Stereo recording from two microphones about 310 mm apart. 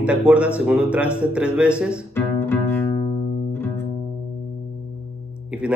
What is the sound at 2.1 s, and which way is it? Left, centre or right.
Music, centre.